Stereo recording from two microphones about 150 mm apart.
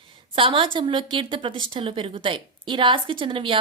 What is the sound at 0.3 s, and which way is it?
A woman's voice, 35° right (ahead or behind).